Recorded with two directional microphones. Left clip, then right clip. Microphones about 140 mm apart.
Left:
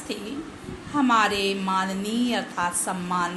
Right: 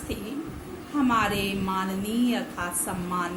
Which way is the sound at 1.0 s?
25° left (ahead or behind).